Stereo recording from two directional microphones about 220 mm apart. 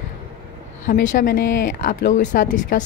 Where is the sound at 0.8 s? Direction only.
40° left (ahead or behind).